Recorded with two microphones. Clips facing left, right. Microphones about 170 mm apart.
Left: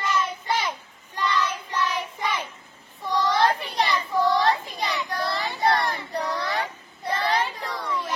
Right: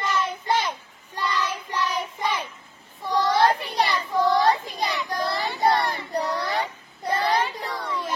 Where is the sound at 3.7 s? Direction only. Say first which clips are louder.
Right 1 dB; 10° right (ahead or behind).